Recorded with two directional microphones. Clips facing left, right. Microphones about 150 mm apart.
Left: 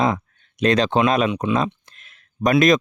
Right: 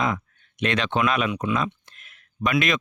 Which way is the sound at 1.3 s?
25° left (ahead or behind).